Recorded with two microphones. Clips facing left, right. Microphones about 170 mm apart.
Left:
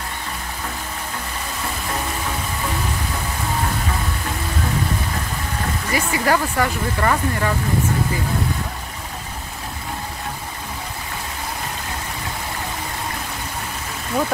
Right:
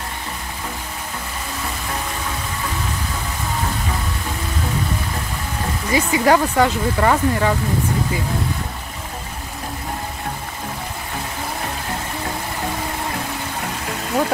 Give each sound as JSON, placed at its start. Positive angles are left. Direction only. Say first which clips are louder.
{"t": 5.9, "sound": "speech", "louder": "right 5 dB", "side_deg": -20}